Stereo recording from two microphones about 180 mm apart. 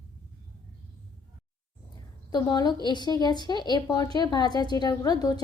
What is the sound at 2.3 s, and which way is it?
Speech, 25° left (ahead or behind).